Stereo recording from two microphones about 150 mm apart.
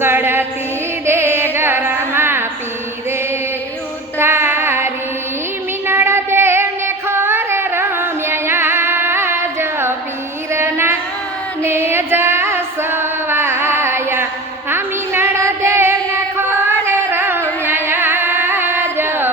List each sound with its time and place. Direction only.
0.0 s music: 15° right (ahead or behind)
4.2 s music: 15° right (ahead or behind)
5.9 s child singing: 15° right (ahead or behind)
10.5 s carnatic music: 15° right (ahead or behind)
11.6 s music: 15° right (ahead or behind)
14.7 s child singing: 15° right (ahead or behind)
16.6 s music: 15° right (ahead or behind)